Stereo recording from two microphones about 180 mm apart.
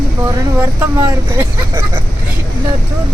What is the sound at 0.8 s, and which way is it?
Speech, 15° right (ahead or behind).